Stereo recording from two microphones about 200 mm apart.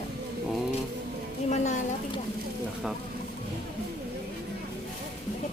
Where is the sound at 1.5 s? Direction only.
35° left (ahead or behind).